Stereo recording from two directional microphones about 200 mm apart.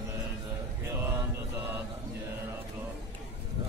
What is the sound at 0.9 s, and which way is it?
Mantra, 10° right (ahead or behind).